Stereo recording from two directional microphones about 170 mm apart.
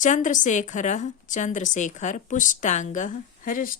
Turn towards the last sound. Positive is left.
turn(degrees=55)  # may be behind; listen again after turning